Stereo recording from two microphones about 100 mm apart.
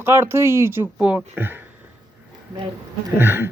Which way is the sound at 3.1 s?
25° right (ahead or behind).